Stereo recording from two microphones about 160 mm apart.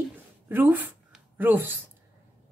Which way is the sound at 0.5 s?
10° right (ahead or behind).